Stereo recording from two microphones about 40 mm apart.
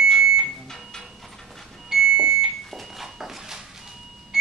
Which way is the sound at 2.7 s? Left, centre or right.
Centre.